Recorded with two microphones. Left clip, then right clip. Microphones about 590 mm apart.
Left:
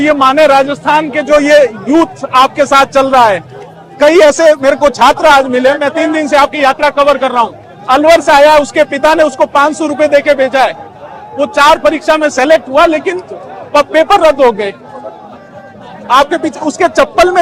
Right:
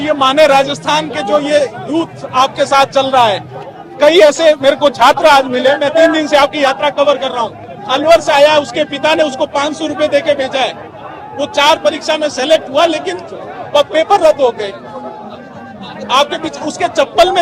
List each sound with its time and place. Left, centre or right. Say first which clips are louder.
0.0 s a man's voice: left 3 dB; left
2.6 s a man's voice: left 3 dB; left
3.9 s a man's voice: left 2 dB; left
12.7 s a man's voice: left 4 dB; left
16.1 s a man's voice: left 4 dB; left